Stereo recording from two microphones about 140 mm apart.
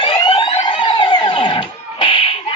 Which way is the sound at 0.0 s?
35° left (ahead or behind).